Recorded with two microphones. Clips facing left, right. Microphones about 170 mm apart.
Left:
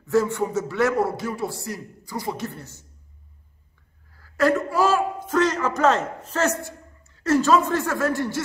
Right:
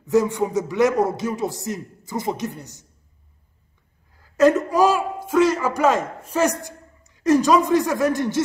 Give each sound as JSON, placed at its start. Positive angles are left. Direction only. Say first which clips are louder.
{"t": 0.0, "sound": "a man's voice", "louder": "right 2 dB", "side_deg": -15}
{"t": 4.1, "sound": "speech", "louder": "right 5 dB", "side_deg": -20}